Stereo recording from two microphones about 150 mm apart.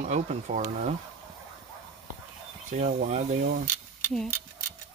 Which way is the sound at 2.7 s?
60° right (ahead or behind).